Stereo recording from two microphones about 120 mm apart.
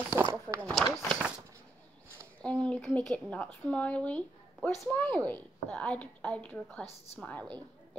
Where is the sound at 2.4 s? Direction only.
10° left (ahead or behind).